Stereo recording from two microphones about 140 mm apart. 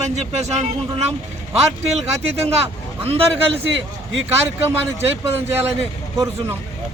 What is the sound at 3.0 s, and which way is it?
Speech, 45° right (ahead or behind).